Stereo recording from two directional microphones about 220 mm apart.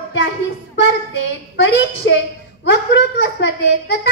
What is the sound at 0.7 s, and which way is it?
A child's voice, 55° left (ahead or behind).